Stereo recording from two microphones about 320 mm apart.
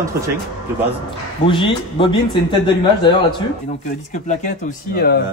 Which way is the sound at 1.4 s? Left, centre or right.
Centre.